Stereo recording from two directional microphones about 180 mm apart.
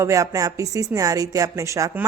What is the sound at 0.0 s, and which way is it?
A woman's voice, 20° right (ahead or behind).